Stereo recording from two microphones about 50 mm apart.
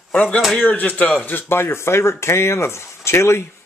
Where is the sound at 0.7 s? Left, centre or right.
Left.